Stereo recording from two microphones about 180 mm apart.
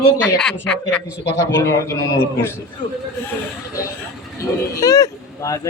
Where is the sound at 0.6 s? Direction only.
5° left (ahead or behind).